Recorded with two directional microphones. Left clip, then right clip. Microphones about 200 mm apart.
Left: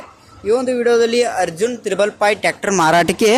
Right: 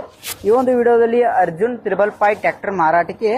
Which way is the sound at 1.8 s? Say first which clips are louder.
Even; 35° left (ahead or behind).